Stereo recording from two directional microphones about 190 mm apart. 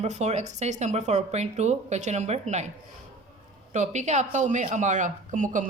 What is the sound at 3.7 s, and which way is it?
Speech, 40° right (ahead or behind).